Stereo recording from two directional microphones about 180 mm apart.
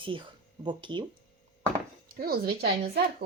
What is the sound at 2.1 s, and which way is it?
Speech, 55° right (ahead or behind).